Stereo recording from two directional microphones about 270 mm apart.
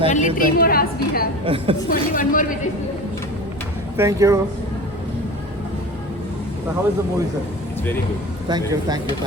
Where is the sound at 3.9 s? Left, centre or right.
Centre.